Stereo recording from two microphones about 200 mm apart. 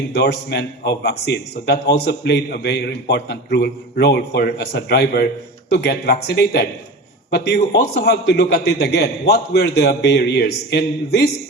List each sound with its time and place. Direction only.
0.1 s a man's voice: 55° left (ahead or behind)